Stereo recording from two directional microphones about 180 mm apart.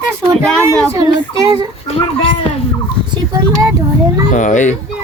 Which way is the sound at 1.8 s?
30° left (ahead or behind).